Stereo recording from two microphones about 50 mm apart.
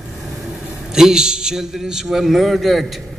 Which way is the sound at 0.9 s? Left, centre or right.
Centre.